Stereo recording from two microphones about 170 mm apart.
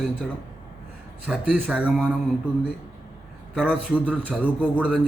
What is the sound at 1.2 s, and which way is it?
Speech, 10° right (ahead or behind).